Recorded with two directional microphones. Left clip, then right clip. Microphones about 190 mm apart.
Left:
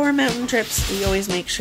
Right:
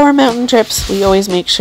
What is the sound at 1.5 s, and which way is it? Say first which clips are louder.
Speech: right 12 dB; 35° right (ahead or behind).